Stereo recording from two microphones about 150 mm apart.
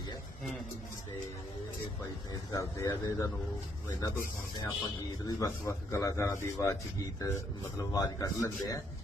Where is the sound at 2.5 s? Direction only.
20° left (ahead or behind).